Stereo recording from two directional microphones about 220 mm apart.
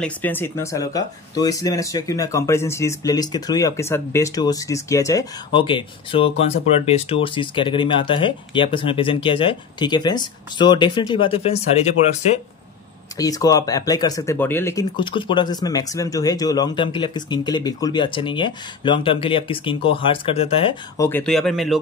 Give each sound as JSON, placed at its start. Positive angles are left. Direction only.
{"t": 0.0, "sound": "speech", "side_deg": 10}
{"t": 13.2, "sound": "speech", "side_deg": 15}
{"t": 21.0, "sound": "speech", "side_deg": 10}